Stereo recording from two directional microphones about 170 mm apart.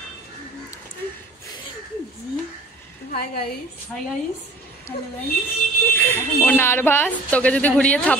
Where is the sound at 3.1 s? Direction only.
65° left (ahead or behind).